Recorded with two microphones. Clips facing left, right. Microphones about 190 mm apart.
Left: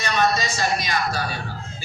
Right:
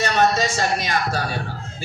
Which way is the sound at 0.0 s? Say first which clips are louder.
Right 3 dB; 45° right (ahead or behind).